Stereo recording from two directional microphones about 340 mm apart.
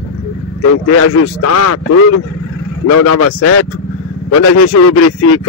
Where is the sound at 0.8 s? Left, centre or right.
Left.